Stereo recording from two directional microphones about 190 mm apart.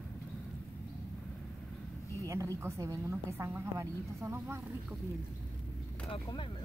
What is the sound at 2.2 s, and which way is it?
A woman's voice, 15° right (ahead or behind).